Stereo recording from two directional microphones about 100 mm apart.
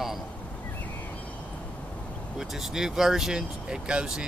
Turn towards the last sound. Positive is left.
turn(degrees=-10)  # may be behind; listen again after turning